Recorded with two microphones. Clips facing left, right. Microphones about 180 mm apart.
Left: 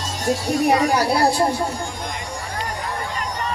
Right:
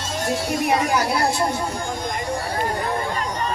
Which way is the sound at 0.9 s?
35° left (ahead or behind).